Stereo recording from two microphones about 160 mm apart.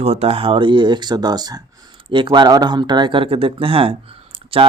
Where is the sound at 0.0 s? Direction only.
40° right (ahead or behind).